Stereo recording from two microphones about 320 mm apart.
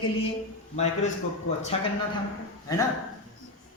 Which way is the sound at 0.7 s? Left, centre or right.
Left.